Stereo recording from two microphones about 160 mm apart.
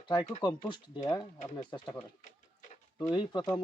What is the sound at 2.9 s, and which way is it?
Speech, 25° left (ahead or behind).